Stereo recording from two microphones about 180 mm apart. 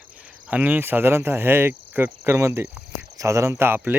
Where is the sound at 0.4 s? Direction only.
10° right (ahead or behind).